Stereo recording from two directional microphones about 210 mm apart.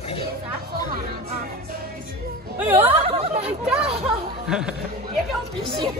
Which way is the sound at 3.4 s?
5° right (ahead or behind).